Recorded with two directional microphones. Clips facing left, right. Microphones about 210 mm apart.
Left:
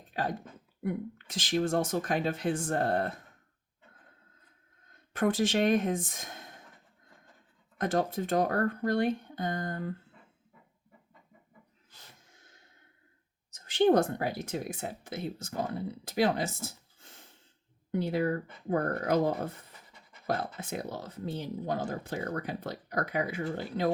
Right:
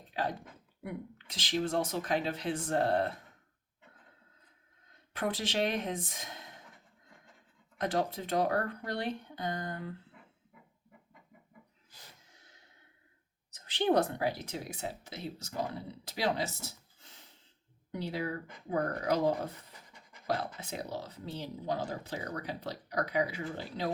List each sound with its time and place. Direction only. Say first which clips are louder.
0.1 s speech: left 2 dB; 50° left (ahead or behind)
5.1 s speech: left 6 dB; 45° left (ahead or behind)
7.8 s speech: left 3 dB; 50° left (ahead or behind)
13.5 s speech: left 5 dB; 45° left (ahead or behind)